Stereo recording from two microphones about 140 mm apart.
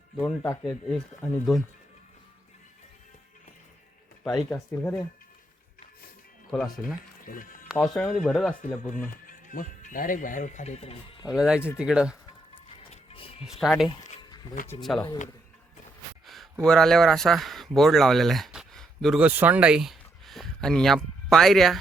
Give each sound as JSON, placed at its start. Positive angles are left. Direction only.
{"t": 0.2, "sound": "speech", "side_deg": 15}
{"t": 0.7, "sound": "speech", "side_deg": 5}
{"t": 4.4, "sound": "speech", "side_deg": 15}
{"t": 6.5, "sound": "speech", "side_deg": 0}
{"t": 7.3, "sound": "music", "side_deg": 75}
{"t": 7.8, "sound": "speech", "side_deg": 10}
{"t": 8.9, "sound": "speech", "side_deg": 70}
{"t": 11.3, "sound": "speech", "side_deg": -5}
{"t": 12.6, "sound": "music", "side_deg": 45}
{"t": 13.4, "sound": "speech", "side_deg": 0}
{"t": 16.2, "sound": "a sound", "side_deg": 0}
{"t": 16.6, "sound": "speech", "side_deg": 5}
{"t": 19.2, "sound": "speech", "side_deg": -10}